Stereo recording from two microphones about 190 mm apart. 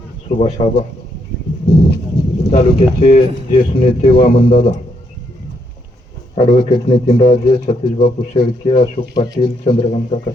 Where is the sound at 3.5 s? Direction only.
40° left (ahead or behind).